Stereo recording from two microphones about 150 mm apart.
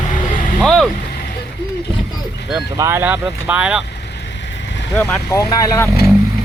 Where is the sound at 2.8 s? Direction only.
20° right (ahead or behind).